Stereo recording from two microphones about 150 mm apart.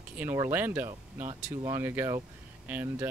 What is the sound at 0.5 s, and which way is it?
Speech, 15° right (ahead or behind).